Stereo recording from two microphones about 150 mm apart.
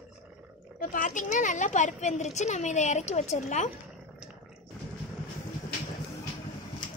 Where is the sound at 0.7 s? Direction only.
60° left (ahead or behind).